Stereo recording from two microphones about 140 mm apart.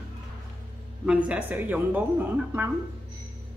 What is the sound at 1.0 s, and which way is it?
A woman's voice, 10° right (ahead or behind).